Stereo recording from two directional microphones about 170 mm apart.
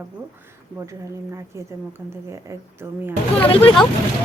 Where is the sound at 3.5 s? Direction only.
35° left (ahead or behind).